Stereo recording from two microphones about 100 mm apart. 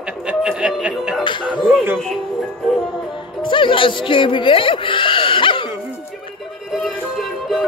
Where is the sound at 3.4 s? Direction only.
55° left (ahead or behind).